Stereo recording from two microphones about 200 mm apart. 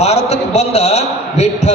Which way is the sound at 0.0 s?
35° left (ahead or behind).